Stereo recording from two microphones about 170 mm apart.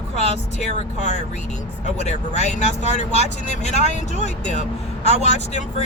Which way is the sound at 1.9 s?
40° left (ahead or behind).